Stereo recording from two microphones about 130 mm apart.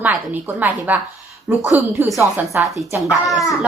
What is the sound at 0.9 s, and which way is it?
Speech, 15° right (ahead or behind).